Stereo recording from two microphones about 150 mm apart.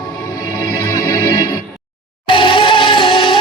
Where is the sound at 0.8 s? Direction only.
25° left (ahead or behind).